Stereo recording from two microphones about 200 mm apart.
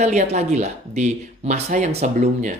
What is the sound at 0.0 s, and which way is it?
Speech, 35° right (ahead or behind).